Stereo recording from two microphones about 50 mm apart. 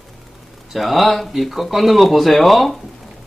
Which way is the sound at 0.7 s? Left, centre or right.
Centre.